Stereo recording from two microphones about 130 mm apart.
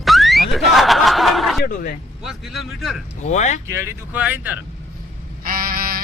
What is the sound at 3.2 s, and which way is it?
Speech, 65° left (ahead or behind).